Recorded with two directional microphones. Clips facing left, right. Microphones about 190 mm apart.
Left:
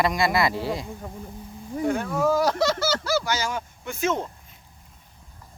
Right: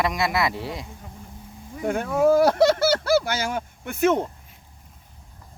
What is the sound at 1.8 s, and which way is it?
Speech, 55° right (ahead or behind).